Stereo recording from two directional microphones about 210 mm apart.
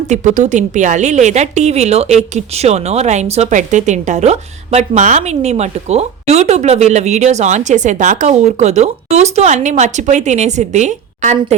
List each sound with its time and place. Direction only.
0.1 s a woman's voice: 35° right (ahead or behind)